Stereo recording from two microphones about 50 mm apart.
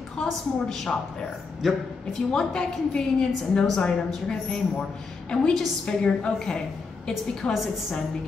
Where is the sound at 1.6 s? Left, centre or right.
Centre.